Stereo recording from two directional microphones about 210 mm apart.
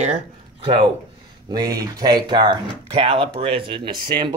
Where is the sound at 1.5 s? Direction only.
20° right (ahead or behind).